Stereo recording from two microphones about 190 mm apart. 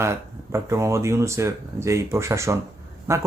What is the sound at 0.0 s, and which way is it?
Speech, 15° right (ahead or behind).